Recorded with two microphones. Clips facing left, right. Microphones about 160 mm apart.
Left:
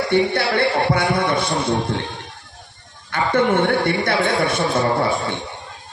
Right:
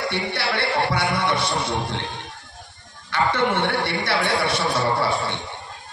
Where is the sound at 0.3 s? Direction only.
50° left (ahead or behind).